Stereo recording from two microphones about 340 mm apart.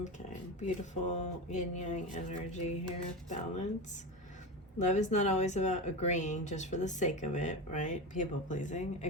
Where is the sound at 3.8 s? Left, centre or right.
Left.